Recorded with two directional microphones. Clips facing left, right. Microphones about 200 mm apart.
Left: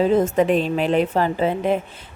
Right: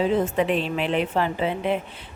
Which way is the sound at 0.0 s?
45° left (ahead or behind).